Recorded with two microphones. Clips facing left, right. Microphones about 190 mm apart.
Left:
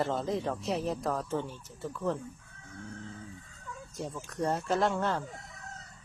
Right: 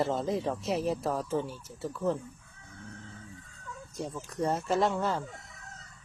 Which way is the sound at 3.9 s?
Centre (ahead or behind).